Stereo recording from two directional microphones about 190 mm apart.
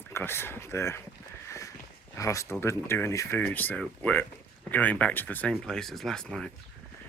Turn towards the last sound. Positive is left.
turn(degrees=5)  # may be behind; listen again after turning